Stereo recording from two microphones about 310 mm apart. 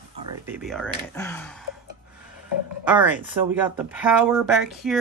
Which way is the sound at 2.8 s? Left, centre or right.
Centre.